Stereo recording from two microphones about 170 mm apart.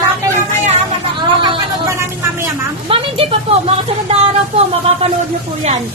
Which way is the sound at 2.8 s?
35° right (ahead or behind).